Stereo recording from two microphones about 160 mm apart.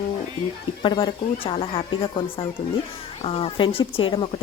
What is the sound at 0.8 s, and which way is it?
Speech, 30° left (ahead or behind).